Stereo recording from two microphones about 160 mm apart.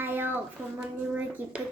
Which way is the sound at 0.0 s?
10° right (ahead or behind).